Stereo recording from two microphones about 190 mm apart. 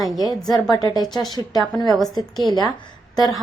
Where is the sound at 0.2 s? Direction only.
20° left (ahead or behind).